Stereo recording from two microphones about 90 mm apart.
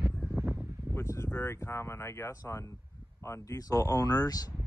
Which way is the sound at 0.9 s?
30° left (ahead or behind).